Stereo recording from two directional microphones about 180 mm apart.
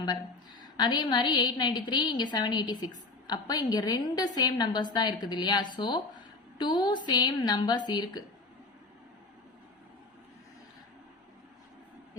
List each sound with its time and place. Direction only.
0.6 s a woman's voice: 25° left (ahead or behind)